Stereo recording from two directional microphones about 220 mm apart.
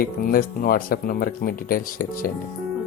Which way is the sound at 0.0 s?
40° left (ahead or behind).